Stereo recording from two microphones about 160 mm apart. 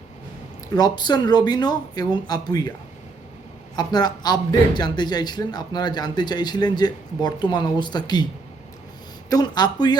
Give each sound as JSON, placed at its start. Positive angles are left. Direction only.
{"t": 0.8, "sound": "speech", "side_deg": 25}
{"t": 3.8, "sound": "speech", "side_deg": 25}
{"t": 9.3, "sound": "speech", "side_deg": 25}